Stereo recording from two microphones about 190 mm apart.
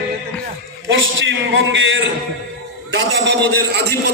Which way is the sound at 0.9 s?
75° right (ahead or behind).